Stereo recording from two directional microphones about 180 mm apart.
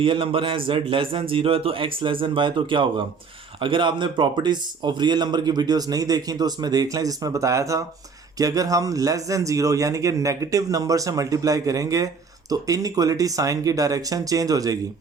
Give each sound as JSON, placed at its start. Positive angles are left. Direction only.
{"t": 0.0, "sound": "a man's voice", "side_deg": -30}